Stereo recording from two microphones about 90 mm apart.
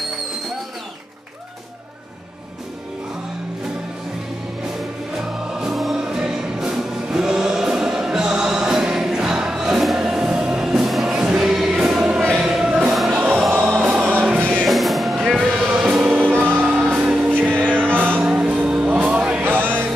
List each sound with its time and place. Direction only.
5.6 s music: centre (ahead or behind)
14.6 s music: centre (ahead or behind)
16.3 s music: 25° right (ahead or behind)
16.8 s music: 5° right (ahead or behind)
17.3 s music: 20° right (ahead or behind)